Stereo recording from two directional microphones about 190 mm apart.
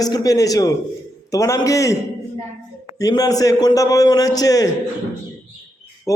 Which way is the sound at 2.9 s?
20° left (ahead or behind).